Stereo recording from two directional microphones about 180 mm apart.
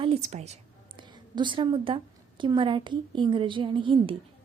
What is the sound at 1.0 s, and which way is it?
A woman's voice, 25° right (ahead or behind).